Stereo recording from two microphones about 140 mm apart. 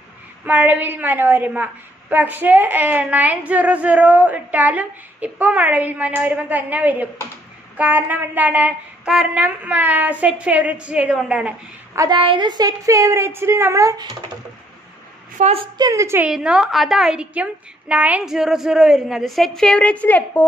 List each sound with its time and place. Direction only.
0.5 s a woman's voice: 10° right (ahead or behind)
11.9 s a woman's voice: 25° right (ahead or behind)
12.2 s a woman's voice: 35° right (ahead or behind)
15.4 s a woman's voice: 60° right (ahead or behind)
15.8 s a woman's voice: 20° right (ahead or behind)
16.3 s a woman's voice: 5° right (ahead or behind); by 20.4 s 10° left (ahead or behind)